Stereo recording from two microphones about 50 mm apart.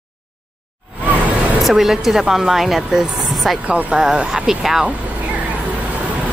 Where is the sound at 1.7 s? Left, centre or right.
Centre.